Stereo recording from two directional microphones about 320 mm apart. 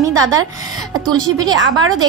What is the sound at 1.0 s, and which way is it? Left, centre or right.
A woman's voice, centre.